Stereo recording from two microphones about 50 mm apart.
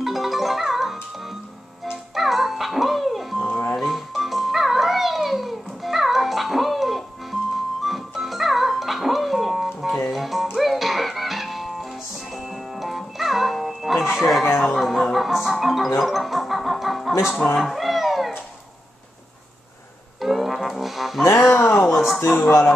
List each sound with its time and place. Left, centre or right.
0.0 s music: centre
2.1 s music: centre
3.4 s music: left
3.7 s music: centre
20.2 s music: centre
21.5 s a sound: left
21.9 s a sound: centre